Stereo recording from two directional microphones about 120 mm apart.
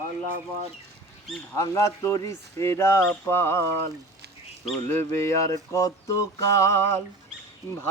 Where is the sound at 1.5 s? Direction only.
25° left (ahead or behind).